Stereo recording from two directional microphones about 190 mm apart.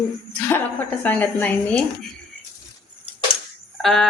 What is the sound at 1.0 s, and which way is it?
Speech, 5° left (ahead or behind).